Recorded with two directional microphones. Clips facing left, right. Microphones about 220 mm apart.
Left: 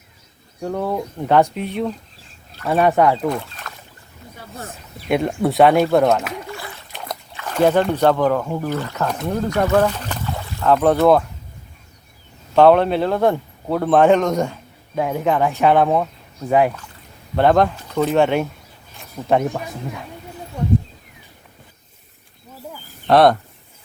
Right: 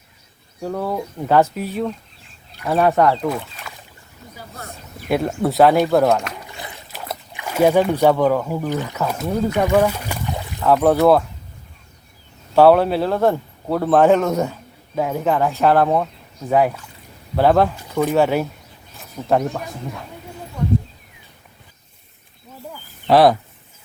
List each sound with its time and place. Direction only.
0.6 s speech: centre (ahead or behind)
6.5 s splash: 20° right (ahead or behind)
6.9 s splash: 5° right (ahead or behind)
7.3 s speech: 10° right (ahead or behind)
12.5 s speech: 5° right (ahead or behind)
18.9 s a sound: centre (ahead or behind)
23.0 s speech: centre (ahead or behind)